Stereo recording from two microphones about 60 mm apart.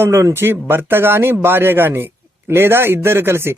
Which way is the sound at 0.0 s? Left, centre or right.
Right.